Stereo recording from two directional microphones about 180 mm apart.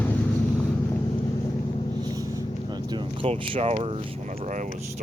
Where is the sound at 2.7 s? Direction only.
25° right (ahead or behind).